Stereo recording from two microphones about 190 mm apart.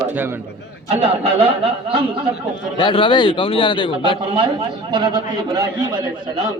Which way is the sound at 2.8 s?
25° left (ahead or behind).